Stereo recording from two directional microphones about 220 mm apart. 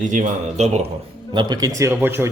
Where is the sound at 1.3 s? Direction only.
20° right (ahead or behind).